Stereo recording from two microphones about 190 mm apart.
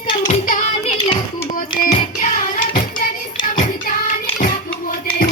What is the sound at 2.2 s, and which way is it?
Music, 45° left (ahead or behind).